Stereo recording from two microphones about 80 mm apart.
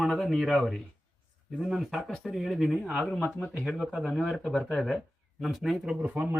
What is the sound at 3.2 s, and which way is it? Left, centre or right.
Speech, centre.